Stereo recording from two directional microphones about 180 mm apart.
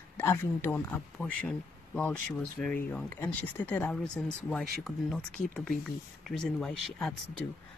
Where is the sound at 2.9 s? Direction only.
10° left (ahead or behind).